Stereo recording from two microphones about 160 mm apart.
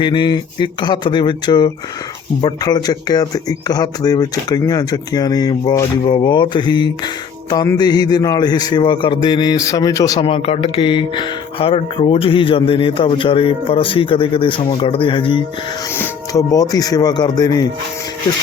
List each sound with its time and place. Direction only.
0.0 s speech: 30° left (ahead or behind)
10.2 s speech: 35° left (ahead or behind)